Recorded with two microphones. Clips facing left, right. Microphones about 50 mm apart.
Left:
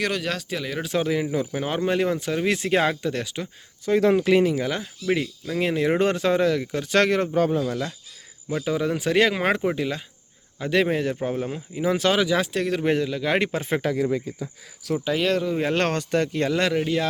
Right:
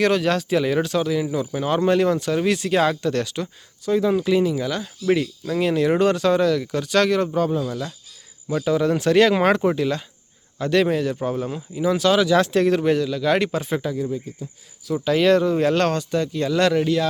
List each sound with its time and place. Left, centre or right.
0.0 s speech: centre
0.9 s a man's voice: left
2.5 s speech: left
4.1 s speech: left
5.1 s a man's voice: centre; by 7.9 s left
8.4 s speech: centre
10.9 s a man's voice: left
12.2 s speech: centre
12.5 s speech: centre
12.8 s a man's voice: left
13.8 s speech: left
15.1 s speech: centre
15.7 s speech: left
16.6 s speech: centre